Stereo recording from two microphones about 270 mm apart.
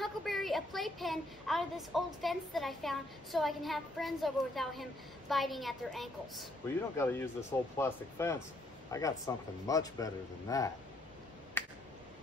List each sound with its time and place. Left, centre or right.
0.0 s a woman's voice: centre
11.6 s finger snapping: centre